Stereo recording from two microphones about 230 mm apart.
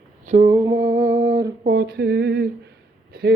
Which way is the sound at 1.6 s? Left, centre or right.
Right.